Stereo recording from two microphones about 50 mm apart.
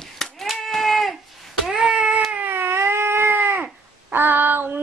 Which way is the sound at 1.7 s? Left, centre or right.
Centre.